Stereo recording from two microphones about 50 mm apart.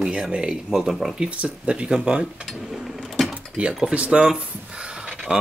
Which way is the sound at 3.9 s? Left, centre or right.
Right.